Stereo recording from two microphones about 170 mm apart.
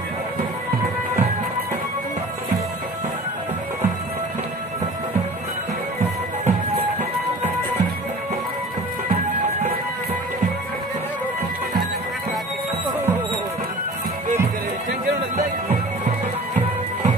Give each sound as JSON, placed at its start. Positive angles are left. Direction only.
{"t": 6.4, "sound": "music", "side_deg": -40}
{"t": 9.1, "sound": "music", "side_deg": -40}